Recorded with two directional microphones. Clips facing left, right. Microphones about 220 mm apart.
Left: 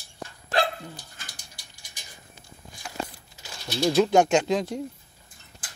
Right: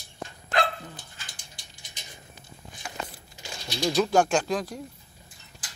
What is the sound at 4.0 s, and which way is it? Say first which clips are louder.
Speech: left 3 dB; 20° left (ahead or behind).